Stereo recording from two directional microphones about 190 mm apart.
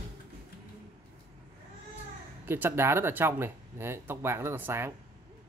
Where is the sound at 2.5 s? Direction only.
10° right (ahead or behind).